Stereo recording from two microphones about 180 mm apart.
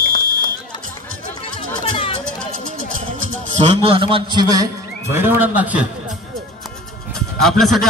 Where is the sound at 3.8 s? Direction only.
30° right (ahead or behind).